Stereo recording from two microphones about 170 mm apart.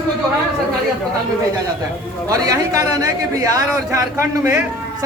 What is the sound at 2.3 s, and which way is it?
Speech, 20° right (ahead or behind).